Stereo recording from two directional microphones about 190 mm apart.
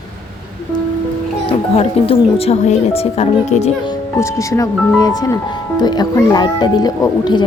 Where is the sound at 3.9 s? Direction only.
15° left (ahead or behind).